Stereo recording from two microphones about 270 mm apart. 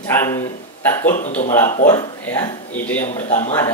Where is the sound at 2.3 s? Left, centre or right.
Centre.